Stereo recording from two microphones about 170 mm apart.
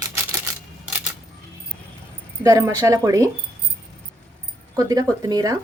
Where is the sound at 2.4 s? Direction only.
15° right (ahead or behind).